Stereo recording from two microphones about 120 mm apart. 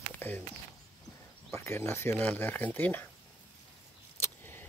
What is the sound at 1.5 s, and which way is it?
Speech, 20° left (ahead or behind).